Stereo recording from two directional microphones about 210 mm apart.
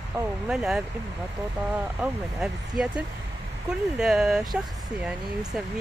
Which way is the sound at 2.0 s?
5° right (ahead or behind).